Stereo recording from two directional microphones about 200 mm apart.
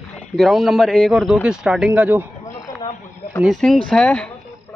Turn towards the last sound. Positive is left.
turn(degrees=5)  # may be behind; listen again after turning